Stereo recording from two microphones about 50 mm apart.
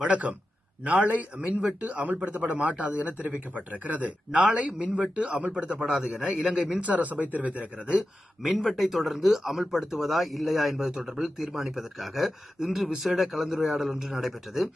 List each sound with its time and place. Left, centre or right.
0.0 s a man's voice: right
6.8 s speech: right
8.4 s speech: centre
10.8 s a man's voice: centre